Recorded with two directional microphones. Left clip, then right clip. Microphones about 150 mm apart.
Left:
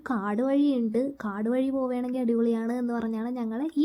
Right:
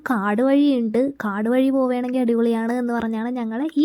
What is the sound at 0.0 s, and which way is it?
A woman's voice, 50° right (ahead or behind).